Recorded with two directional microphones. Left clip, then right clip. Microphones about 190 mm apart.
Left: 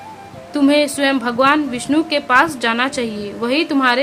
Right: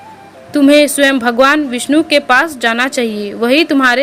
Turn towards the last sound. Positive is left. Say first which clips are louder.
# right 5 dB
turn(degrees=-25)  # may be behind; listen again after turning